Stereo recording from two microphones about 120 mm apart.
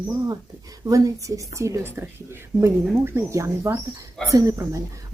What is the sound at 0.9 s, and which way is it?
Speech, 30° right (ahead or behind).